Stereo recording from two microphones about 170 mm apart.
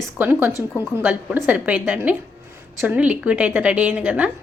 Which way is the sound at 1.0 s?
10° right (ahead or behind).